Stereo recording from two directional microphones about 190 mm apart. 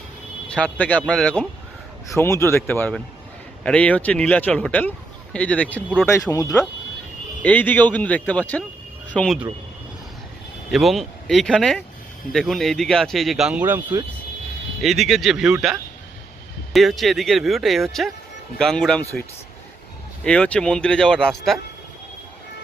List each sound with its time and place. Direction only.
0.4 s speech: 5° left (ahead or behind)
10.7 s speech: centre (ahead or behind)
20.2 s speech: 5° left (ahead or behind)